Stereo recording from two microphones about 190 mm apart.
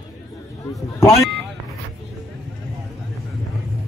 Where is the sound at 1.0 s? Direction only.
15° left (ahead or behind).